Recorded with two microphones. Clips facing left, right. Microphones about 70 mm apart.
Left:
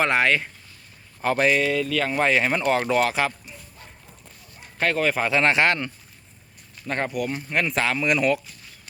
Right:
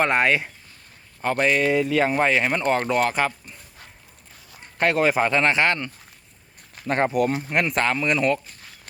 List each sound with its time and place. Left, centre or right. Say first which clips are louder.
0.0 s speech: right 1 dB; centre
1.2 s speech: left 1 dB; centre
1.6 s speech: right 3 dB; right
2.1 s speech: even; centre
4.9 s speech: right 4 dB; centre
5.5 s speech: left 1 dB; centre
6.9 s speech: right 5 dB; right
7.5 s speech: right 2 dB; centre
7.8 s speech: left 1 dB; centre